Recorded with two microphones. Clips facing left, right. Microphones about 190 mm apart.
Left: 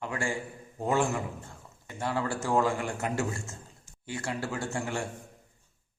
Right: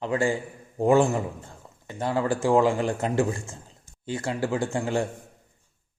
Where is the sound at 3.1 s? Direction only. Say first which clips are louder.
Right 7 dB; 15° right (ahead or behind).